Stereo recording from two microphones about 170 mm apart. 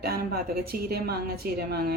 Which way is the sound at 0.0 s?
65° right (ahead or behind).